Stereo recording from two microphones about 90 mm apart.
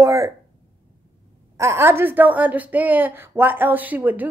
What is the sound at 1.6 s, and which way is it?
Speech, 30° right (ahead or behind).